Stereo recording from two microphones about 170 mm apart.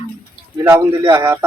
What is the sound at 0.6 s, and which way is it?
Speech, 15° right (ahead or behind).